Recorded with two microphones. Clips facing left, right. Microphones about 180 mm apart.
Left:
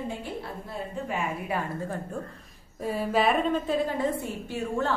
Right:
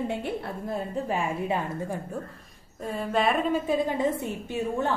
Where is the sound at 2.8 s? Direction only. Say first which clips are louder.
Left 1 dB; 5° left (ahead or behind).